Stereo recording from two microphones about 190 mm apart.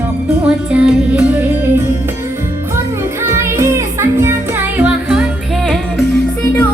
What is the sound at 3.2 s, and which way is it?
Music, 15° right (ahead or behind).